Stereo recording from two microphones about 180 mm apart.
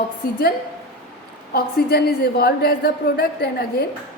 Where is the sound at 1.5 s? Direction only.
60° left (ahead or behind).